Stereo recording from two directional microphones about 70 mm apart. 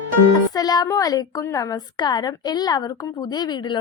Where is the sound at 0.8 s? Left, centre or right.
Left.